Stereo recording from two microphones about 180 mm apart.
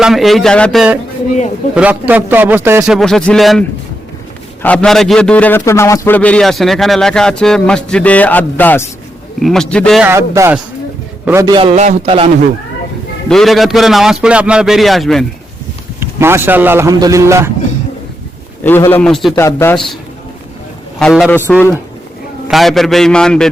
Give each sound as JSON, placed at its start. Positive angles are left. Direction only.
{"t": 0.0, "sound": "a man's voice", "side_deg": 0}
{"t": 2.9, "sound": "a man's voice", "side_deg": 5}
{"t": 4.6, "sound": "a man's voice", "side_deg": 5}
{"t": 10.0, "sound": "a man's voice", "side_deg": -15}
{"t": 11.5, "sound": "a man's voice", "side_deg": -35}
{"t": 13.2, "sound": "a man's voice", "side_deg": 0}
{"t": 16.0, "sound": "a man's voice", "side_deg": -15}
{"t": 18.6, "sound": "a man's voice", "side_deg": 10}
{"t": 19.4, "sound": "a man's voice", "side_deg": 15}
{"t": 19.7, "sound": "a man's voice", "side_deg": 0}
{"t": 21.0, "sound": "a man's voice", "side_deg": 5}
{"t": 22.4, "sound": "a man's voice", "side_deg": 0}